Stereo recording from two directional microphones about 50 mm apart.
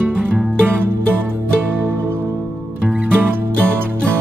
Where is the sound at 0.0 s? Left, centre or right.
Right.